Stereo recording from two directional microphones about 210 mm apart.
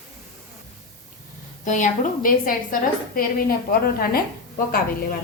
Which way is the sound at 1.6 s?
35° left (ahead or behind).